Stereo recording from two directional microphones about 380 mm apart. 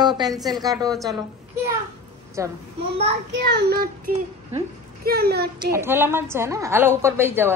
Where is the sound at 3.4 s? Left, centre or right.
Right.